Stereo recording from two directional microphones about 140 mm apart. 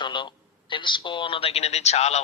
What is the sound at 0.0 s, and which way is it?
Speech, 35° left (ahead or behind).